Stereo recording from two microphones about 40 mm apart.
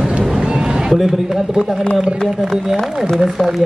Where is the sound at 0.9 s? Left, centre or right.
Centre.